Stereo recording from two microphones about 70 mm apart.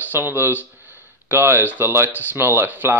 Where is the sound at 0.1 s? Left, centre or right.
Right.